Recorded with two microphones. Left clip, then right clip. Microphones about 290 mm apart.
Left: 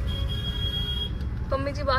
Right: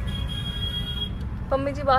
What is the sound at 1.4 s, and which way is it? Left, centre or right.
Vehicle, centre.